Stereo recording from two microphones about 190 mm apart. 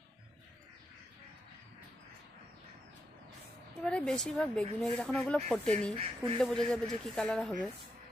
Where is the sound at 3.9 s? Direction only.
5° left (ahead or behind).